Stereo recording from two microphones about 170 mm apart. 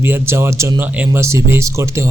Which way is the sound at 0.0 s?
15° right (ahead or behind).